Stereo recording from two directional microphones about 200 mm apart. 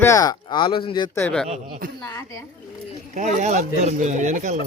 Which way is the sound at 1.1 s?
10° left (ahead or behind).